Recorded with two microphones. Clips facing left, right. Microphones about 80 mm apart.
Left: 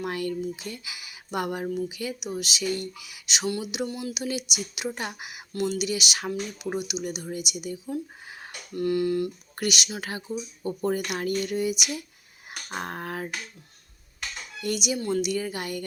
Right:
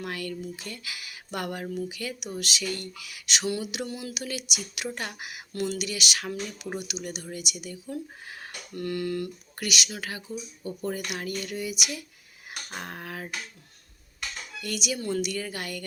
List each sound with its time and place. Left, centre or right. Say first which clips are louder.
0.0 s speech: left 5 dB; left
5.5 s speech: left 3 dB; centre
5.8 s speech: left 3 dB; left
9.6 s speech: left 3 dB; left
14.2 s a sound: left 1 dB; left
14.9 s speech: left 1 dB; centre
15.2 s speech: left 3 dB; centre